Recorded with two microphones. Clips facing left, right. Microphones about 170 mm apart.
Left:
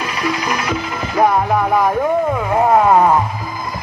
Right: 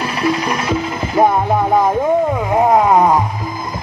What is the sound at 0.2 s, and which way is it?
Music, 25° right (ahead or behind).